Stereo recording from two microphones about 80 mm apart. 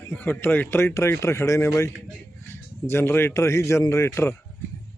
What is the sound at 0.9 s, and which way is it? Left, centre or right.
Speech, left.